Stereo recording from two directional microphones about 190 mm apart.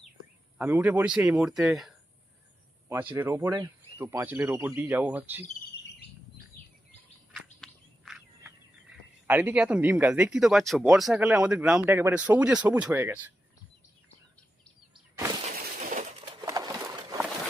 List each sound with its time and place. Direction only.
0.6 s speech: 10° right (ahead or behind)
2.9 s speech: 10° right (ahead or behind)
7.3 s a sound: centre (ahead or behind)
9.2 s speech: 10° right (ahead or behind)
15.5 s breaking: 45° right (ahead or behind)
16.5 s a sound: 20° right (ahead or behind)